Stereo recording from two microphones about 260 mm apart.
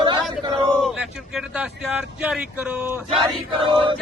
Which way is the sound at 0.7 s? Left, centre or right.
Centre.